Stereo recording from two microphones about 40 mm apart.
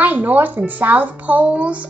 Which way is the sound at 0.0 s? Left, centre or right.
Right.